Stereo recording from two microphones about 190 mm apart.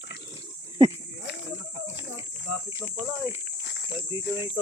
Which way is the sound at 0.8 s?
25° right (ahead or behind).